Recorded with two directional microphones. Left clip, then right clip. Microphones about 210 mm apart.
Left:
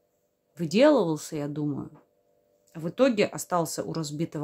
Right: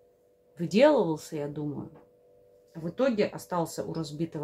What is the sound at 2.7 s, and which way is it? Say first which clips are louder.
Speech: left 4 dB; 45° left (ahead or behind).